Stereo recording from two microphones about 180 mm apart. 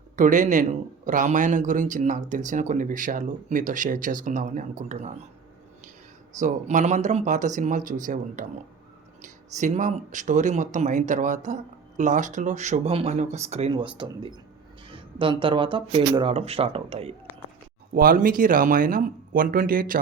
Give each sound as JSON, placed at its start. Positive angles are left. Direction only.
{"t": 0.2, "sound": "a man's voice", "side_deg": -45}
{"t": 6.4, "sound": "a man's voice", "side_deg": -40}
{"t": 17.9, "sound": "a man's voice", "side_deg": -55}